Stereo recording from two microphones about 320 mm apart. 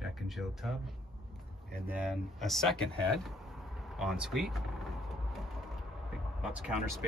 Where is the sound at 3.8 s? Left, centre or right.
Centre.